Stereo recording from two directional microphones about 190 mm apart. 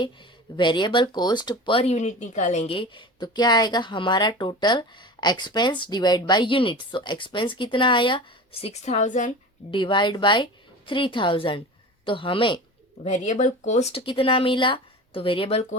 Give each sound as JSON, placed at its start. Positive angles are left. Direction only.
{"t": 0.5, "sound": "speech", "side_deg": 25}
{"t": 8.6, "sound": "a woman's voice", "side_deg": 35}
{"t": 9.7, "sound": "speech", "side_deg": 25}
{"t": 13.1, "sound": "speech", "side_deg": 40}